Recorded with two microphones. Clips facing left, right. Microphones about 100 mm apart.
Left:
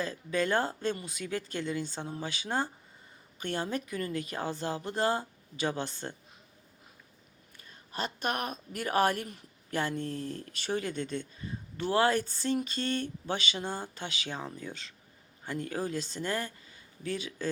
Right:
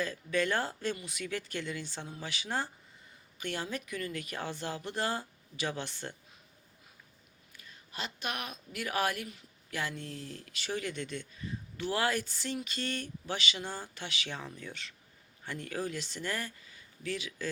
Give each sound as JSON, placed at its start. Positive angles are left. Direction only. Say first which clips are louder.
{"t": 0.0, "sound": "a sound", "louder": "left 1 dB", "side_deg": 30}
{"t": 3.7, "sound": "speech", "louder": "left 4 dB", "side_deg": 35}
{"t": 7.7, "sound": "a woman's voice", "louder": "left 5 dB", "side_deg": 45}
{"t": 11.8, "sound": "a sound", "louder": "left 5 dB", "side_deg": 30}
{"t": 14.3, "sound": "speech", "louder": "left 4 dB", "side_deg": 30}
{"t": 15.4, "sound": "speech", "louder": "left 3 dB", "side_deg": 20}